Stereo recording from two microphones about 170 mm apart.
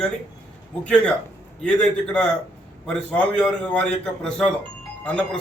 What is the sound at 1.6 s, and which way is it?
A man's voice, 5° left (ahead or behind).